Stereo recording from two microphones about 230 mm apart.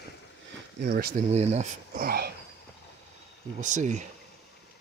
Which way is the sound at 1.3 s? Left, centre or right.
Right.